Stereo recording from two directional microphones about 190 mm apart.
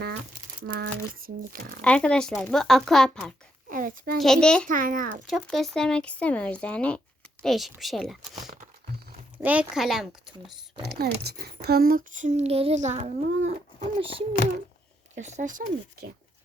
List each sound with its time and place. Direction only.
0.7 s speech: 50° right (ahead or behind)
1.8 s speech: 5° left (ahead or behind)
3.7 s a child's voice: 45° right (ahead or behind)
4.2 s speech: 5° left (ahead or behind)
4.7 s speech: 45° right (ahead or behind)
5.2 s speech: centre (ahead or behind)
9.4 s speech: 5° right (ahead or behind)
10.8 s speech: 55° right (ahead or behind)
11.6 s child singing: 55° right (ahead or behind)
14.0 s a child's voice: 30° right (ahead or behind); by 16.1 s 50° right (ahead or behind)